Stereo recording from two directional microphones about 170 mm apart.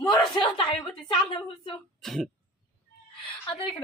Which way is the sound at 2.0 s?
Centre (ahead or behind).